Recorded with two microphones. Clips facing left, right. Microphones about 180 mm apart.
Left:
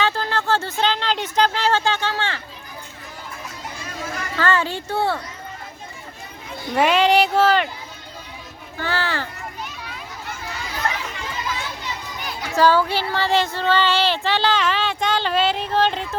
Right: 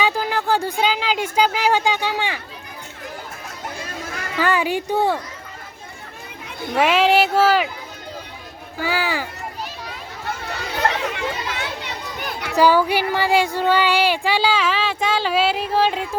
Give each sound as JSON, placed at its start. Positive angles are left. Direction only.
{"t": 0.0, "sound": "a sound", "side_deg": -10}
{"t": 4.4, "sound": "speech", "side_deg": -15}
{"t": 6.7, "sound": "speech", "side_deg": -5}
{"t": 8.8, "sound": "speech", "side_deg": -10}
{"t": 10.5, "sound": "a sound", "side_deg": -65}
{"t": 12.5, "sound": "speech", "side_deg": -15}